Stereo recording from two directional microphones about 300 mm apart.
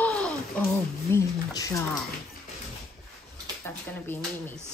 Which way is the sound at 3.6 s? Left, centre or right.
Centre.